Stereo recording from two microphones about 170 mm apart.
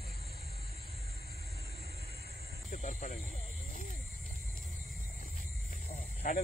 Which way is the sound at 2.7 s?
45° left (ahead or behind).